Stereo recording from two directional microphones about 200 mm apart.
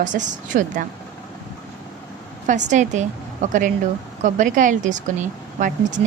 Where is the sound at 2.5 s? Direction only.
40° right (ahead or behind).